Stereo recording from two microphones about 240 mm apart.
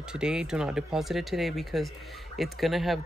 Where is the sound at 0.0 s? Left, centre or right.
Centre.